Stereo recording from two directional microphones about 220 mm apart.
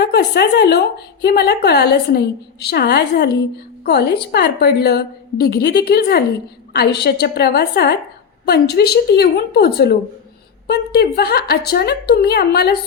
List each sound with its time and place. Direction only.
0.0 s a woman's voice: 50° left (ahead or behind)